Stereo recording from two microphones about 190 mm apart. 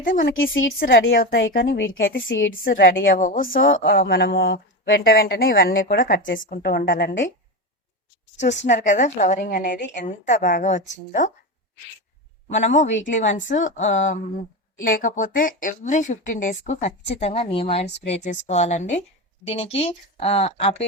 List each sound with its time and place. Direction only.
0.0 s a woman's voice: 45° left (ahead or behind)
0.3 s a woman's voice: 90° left
0.8 s a woman's voice: 60° left (ahead or behind)
2.6 s a woman's voice: 55° left (ahead or behind)
8.6 s speech: 40° left (ahead or behind)
12.6 s speech: 40° left (ahead or behind)